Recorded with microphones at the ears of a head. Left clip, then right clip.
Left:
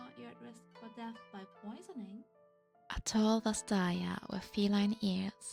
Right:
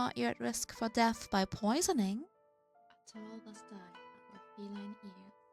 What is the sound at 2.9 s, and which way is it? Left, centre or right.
Speech, left.